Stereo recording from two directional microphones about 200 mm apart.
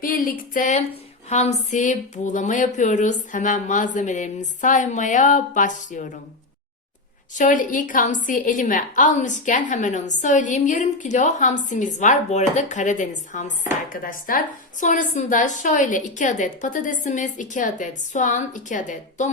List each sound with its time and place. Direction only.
0.0 s a woman's voice: 45° left (ahead or behind)
7.3 s a woman's voice: 40° left (ahead or behind)